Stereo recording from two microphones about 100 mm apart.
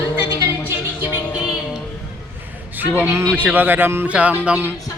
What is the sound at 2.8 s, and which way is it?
Speech, 20° right (ahead or behind).